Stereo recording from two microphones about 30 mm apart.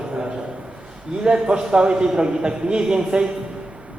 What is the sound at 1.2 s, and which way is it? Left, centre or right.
Speech, right.